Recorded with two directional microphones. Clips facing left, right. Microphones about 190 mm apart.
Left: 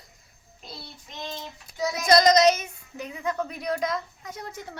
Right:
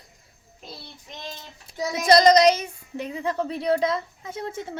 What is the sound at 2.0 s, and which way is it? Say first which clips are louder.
Speech: right 3 dB; 30° right (ahead or behind).